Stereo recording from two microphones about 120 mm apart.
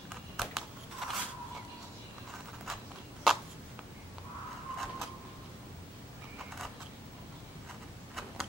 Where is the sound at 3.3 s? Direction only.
Centre (ahead or behind).